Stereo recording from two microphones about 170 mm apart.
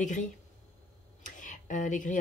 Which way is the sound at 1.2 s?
50° left (ahead or behind).